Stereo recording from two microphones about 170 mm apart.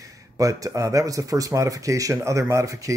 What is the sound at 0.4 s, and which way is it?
Speech, 20° right (ahead or behind).